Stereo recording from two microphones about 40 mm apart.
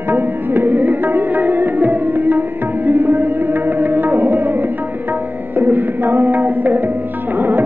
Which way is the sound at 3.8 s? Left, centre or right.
Right.